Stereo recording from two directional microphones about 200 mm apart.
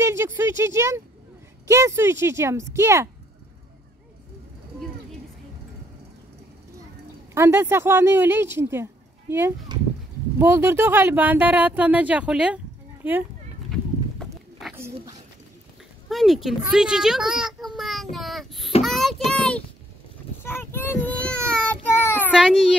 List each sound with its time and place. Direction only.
0.0 s speech: 15° right (ahead or behind)
7.3 s speech: 10° right (ahead or behind)
13.7 s clip-clop: centre (ahead or behind)
14.6 s a sound: centre (ahead or behind)
16.1 s a child's voice: centre (ahead or behind)
18.1 s child singing: centre (ahead or behind)
18.8 s a child's voice: centre (ahead or behind)
20.4 s child singing: 10° left (ahead or behind)
22.3 s speech: 5° right (ahead or behind)